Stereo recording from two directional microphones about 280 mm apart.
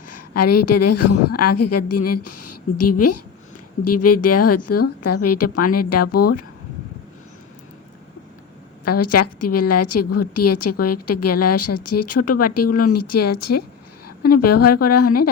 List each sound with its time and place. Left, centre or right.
0.1 s a woman's voice: left
8.8 s a woman's voice: left